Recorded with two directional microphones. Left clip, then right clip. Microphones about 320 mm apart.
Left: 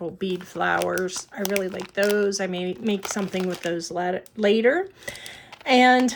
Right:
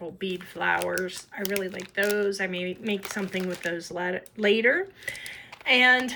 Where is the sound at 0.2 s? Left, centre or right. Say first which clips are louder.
Left 3 dB; centre.